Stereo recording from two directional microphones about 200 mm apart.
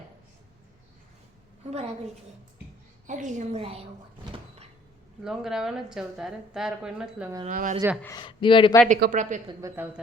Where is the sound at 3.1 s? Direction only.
40° right (ahead or behind).